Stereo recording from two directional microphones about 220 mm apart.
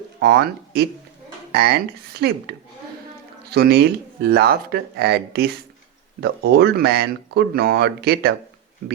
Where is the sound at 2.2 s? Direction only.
50° right (ahead or behind).